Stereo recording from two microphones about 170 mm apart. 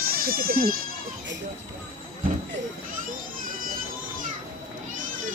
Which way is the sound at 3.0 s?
55° right (ahead or behind).